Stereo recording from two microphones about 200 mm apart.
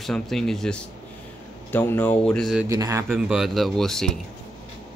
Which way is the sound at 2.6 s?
15° right (ahead or behind).